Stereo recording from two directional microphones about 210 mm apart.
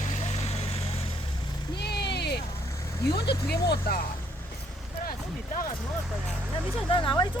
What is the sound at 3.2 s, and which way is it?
Speech, 50° left (ahead or behind).